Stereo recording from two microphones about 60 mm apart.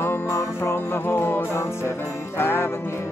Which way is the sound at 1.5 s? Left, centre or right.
Left.